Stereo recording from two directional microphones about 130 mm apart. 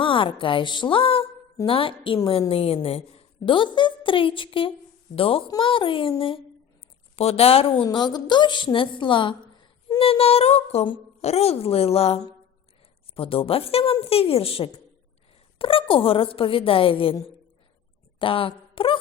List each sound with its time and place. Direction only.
0.0 s a woman's voice: 40° left (ahead or behind)
7.9 s a woman's voice: 35° left (ahead or behind)
18.2 s a woman's voice: 40° left (ahead or behind)